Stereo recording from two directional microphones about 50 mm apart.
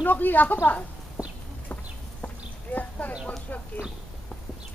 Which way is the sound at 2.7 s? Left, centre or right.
Left.